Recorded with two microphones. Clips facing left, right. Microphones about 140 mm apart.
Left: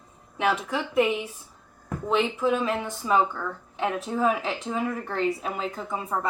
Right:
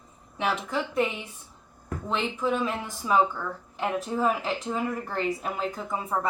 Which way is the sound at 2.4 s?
Centre (ahead or behind).